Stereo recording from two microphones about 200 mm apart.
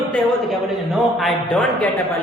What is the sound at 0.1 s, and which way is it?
A man's voice, centre (ahead or behind).